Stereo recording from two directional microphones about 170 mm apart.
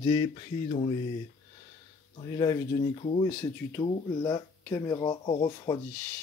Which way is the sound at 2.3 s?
20° left (ahead or behind).